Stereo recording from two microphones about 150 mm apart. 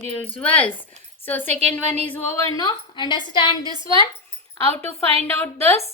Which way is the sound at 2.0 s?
10° left (ahead or behind).